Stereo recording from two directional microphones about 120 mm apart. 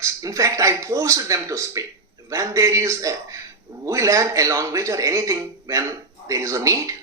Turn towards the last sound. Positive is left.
turn(degrees=-25)  # may be behind; listen again after turning